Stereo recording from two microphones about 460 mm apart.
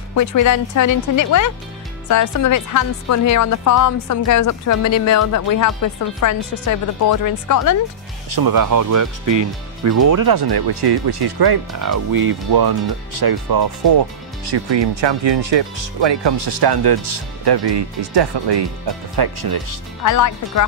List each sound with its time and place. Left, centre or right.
0.1 s a woman's voice: left
8.4 s speech: right
14.5 s speech: right
20.0 s a woman's voice: left